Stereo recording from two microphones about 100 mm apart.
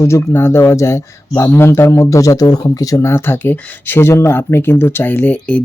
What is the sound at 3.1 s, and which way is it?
Speech, 20° left (ahead or behind).